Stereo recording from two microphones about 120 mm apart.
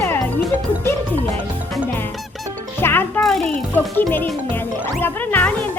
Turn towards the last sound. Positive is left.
turn(degrees=15)  # may be behind; listen again after turning